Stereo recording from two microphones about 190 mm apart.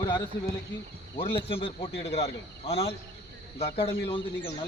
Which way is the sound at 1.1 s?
30° left (ahead or behind).